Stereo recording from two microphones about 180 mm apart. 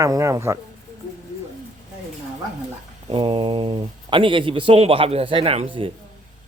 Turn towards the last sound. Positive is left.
turn(degrees=-30)  # may be behind; listen again after turning